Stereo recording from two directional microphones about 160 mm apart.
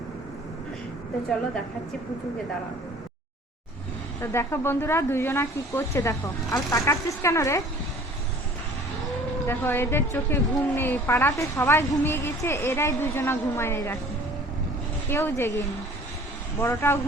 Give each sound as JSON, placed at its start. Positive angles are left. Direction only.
{"t": 4.2, "sound": "speech", "side_deg": 15}
{"t": 9.5, "sound": "speech", "side_deg": 15}
{"t": 15.1, "sound": "speech", "side_deg": 15}